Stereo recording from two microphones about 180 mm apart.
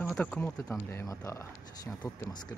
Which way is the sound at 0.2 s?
5° left (ahead or behind).